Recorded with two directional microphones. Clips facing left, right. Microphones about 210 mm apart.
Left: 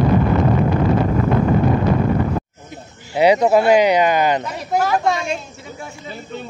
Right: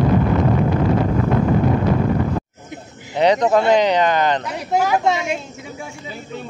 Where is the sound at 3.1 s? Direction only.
10° left (ahead or behind).